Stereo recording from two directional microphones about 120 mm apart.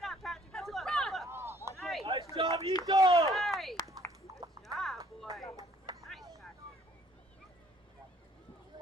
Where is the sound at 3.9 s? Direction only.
25° right (ahead or behind).